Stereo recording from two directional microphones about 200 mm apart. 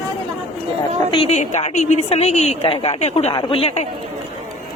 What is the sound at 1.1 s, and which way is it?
A woman's voice, 30° left (ahead or behind).